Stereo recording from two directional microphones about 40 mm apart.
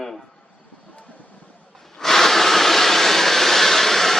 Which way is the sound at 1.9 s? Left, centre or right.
Centre.